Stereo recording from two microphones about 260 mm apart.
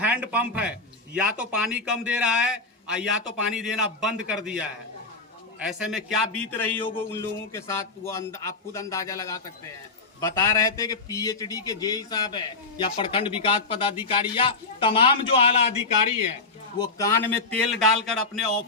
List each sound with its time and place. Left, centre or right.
0.0 s a man's voice: centre; by 15.8 s left
16.7 s a man's voice: centre
17.7 s a man's voice: centre